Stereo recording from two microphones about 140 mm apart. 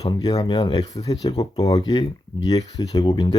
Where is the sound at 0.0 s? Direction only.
30° left (ahead or behind).